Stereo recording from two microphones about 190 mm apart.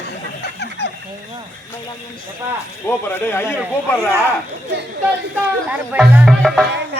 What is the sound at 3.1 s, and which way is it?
Speech, 10° left (ahead or behind).